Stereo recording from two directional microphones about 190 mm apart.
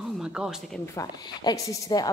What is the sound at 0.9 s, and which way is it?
A woman's voice, 20° left (ahead or behind).